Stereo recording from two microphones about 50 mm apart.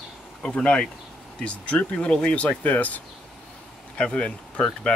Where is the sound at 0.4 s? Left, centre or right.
Centre.